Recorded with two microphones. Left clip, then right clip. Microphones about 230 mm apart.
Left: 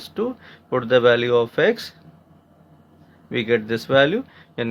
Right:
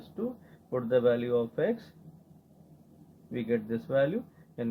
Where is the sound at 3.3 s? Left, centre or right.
Left.